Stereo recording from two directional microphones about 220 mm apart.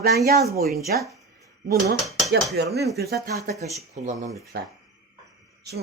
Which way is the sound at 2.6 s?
50° right (ahead or behind).